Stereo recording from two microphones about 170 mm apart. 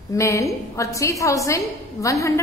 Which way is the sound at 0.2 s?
20° left (ahead or behind).